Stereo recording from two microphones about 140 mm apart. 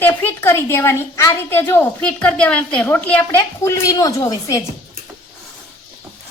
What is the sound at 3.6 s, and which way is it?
Speech, 25° left (ahead or behind).